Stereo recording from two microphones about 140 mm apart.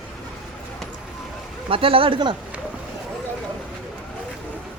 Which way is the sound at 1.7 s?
40° right (ahead or behind).